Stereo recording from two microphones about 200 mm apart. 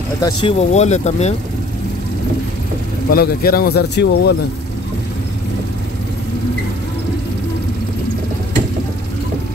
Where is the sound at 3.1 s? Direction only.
50° left (ahead or behind).